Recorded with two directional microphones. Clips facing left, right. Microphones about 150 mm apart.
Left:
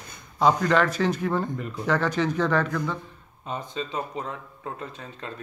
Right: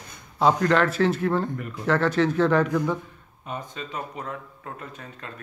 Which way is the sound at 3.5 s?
25° left (ahead or behind).